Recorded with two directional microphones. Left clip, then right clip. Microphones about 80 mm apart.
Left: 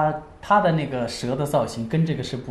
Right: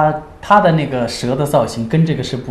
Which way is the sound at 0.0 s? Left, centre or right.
Right.